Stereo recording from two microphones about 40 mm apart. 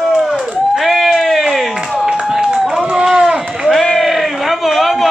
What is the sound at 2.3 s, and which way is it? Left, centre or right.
Run, centre.